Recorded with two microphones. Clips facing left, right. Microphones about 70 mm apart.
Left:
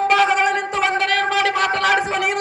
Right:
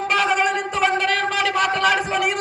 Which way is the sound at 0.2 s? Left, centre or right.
Left.